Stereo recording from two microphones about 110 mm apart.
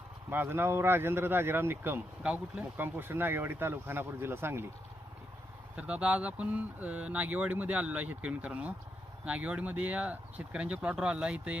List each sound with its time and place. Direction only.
0.3 s speech: 20° right (ahead or behind)
5.7 s speech: 10° right (ahead or behind)